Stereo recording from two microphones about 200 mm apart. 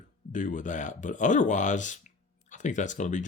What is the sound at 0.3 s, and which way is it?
Speech, 40° left (ahead or behind).